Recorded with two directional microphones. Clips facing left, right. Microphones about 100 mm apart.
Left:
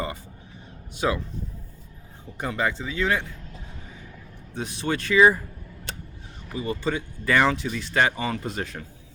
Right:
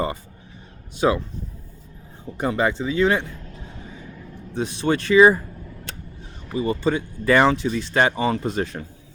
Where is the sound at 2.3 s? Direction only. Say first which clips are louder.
Right 5 dB; 30° right (ahead or behind).